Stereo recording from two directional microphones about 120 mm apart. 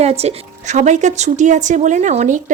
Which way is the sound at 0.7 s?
90° right.